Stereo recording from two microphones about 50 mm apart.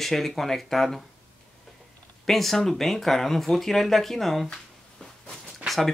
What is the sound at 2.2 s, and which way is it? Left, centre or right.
Speech, centre.